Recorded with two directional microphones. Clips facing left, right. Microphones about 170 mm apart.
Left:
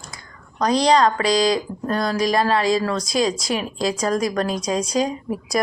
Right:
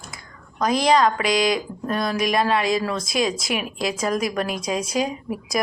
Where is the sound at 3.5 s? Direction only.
25° left (ahead or behind).